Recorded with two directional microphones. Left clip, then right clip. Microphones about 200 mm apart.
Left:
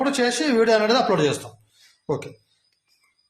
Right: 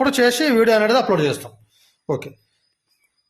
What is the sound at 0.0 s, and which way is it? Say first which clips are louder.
Speech: right 5 dB; 45° right (ahead or behind).